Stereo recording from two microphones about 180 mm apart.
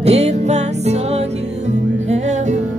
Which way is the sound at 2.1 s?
40° right (ahead or behind).